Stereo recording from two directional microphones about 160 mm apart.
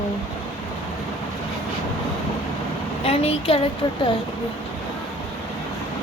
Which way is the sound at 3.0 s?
40° left (ahead or behind).